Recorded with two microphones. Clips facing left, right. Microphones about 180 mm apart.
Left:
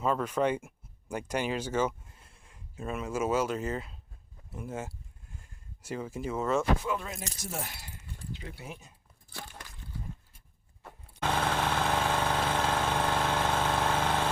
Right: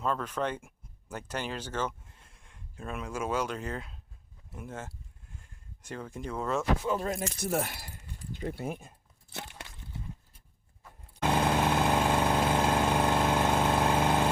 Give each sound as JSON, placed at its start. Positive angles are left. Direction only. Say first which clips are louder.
{"t": 0.0, "sound": "speech", "louder": "left 3 dB", "side_deg": 5}
{"t": 6.8, "sound": "speech", "louder": "right 4 dB", "side_deg": -40}
{"t": 7.3, "sound": "speech", "louder": "right 8 dB", "side_deg": -60}
{"t": 9.3, "sound": "a sound", "louder": "right 2 dB", "side_deg": -25}
{"t": 11.2, "sound": "vehicle", "louder": "right 3 dB", "side_deg": -10}